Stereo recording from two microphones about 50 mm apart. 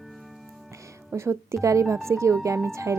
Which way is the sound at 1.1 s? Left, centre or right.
Right.